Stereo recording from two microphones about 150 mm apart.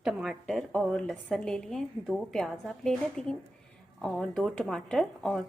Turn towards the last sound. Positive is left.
turn(degrees=5)  # may be behind; listen again after turning